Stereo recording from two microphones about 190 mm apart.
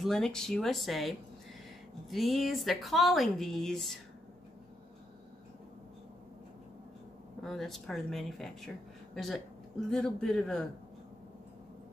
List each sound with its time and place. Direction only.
0.0 s speech: 5° left (ahead or behind)
7.4 s speech: centre (ahead or behind)